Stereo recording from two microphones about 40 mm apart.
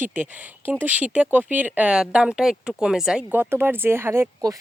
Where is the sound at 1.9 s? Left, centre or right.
Right.